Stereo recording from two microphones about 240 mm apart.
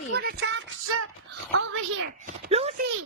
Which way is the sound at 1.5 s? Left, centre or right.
Right.